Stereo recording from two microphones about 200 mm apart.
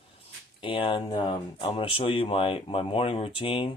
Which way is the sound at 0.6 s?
25° left (ahead or behind).